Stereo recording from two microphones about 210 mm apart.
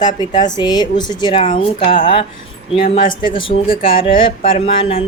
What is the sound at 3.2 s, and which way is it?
Speech, 25° left (ahead or behind).